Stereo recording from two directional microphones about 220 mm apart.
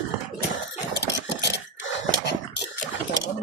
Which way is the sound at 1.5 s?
50° left (ahead or behind).